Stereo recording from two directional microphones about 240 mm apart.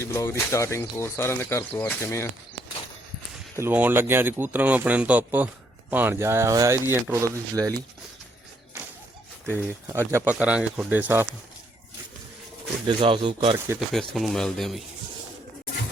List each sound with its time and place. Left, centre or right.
0.0 s speech: centre
3.6 s speech: centre
9.5 s speech: centre
13.0 s speech: right
13.7 s speech: centre